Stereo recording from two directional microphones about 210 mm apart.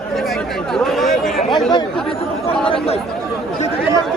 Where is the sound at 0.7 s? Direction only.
Centre (ahead or behind).